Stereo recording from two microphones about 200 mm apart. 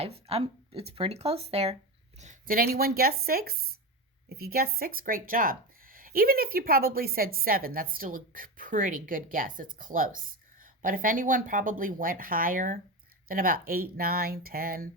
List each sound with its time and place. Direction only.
0.0 s speech: 30° right (ahead or behind); by 14.8 s 45° right (ahead or behind)